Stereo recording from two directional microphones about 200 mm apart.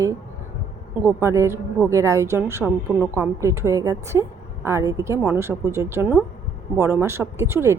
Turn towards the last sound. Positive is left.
turn(degrees=-15)  # may be behind; listen again after turning